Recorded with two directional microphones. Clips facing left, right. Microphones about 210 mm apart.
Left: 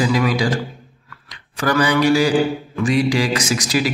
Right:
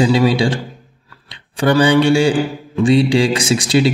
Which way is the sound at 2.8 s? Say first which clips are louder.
Right 5 dB; 30° right (ahead or behind).